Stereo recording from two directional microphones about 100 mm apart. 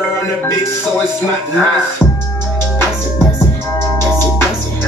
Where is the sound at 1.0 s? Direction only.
20° left (ahead or behind).